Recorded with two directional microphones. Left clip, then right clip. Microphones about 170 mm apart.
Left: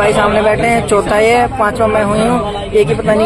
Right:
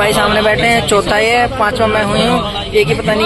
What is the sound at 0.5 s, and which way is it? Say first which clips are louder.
A man's voice: even; 15° left (ahead or behind).